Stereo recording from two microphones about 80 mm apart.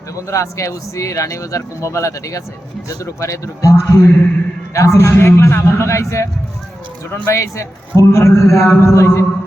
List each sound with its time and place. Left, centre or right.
0.2 s speech: left
7.3 s speech: left